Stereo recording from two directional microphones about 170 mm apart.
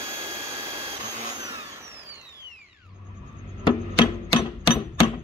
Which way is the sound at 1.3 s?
20° right (ahead or behind).